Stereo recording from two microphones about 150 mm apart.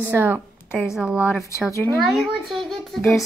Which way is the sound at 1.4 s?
20° left (ahead or behind).